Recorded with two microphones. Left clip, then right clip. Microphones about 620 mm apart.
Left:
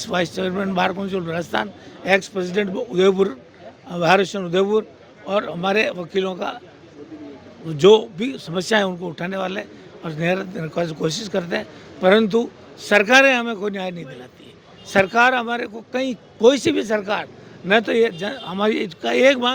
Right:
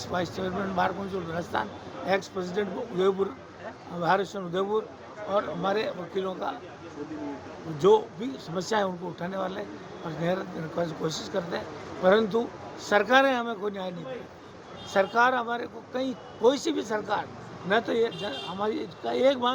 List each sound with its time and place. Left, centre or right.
0.1 s speech: left
2.0 s speech: left
7.8 s speech: left